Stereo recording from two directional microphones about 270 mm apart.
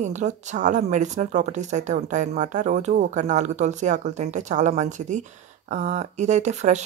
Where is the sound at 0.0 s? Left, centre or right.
Right.